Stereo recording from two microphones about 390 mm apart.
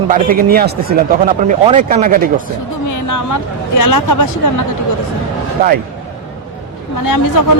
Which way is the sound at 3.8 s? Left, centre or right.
Left.